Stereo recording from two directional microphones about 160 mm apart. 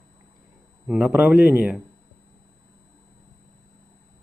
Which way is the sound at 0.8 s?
5° right (ahead or behind).